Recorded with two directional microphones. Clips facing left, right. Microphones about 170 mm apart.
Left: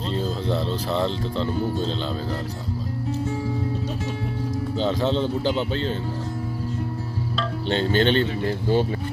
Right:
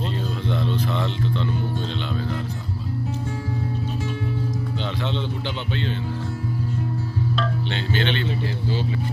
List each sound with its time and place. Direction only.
0.1 s speech: 30° left (ahead or behind)
4.7 s speech: 40° left (ahead or behind)
7.7 s speech: 40° left (ahead or behind)